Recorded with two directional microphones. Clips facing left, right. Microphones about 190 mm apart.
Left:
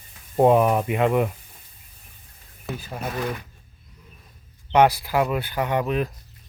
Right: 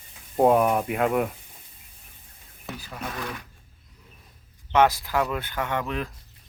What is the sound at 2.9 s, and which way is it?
Speech, 30° left (ahead or behind).